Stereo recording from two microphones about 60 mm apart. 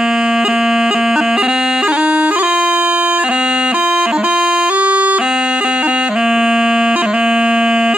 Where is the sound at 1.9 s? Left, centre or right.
Right.